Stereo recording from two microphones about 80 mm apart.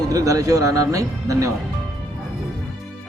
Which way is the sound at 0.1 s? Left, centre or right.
Right.